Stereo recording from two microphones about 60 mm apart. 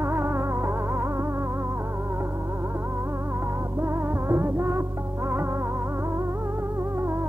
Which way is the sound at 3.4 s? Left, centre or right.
Right.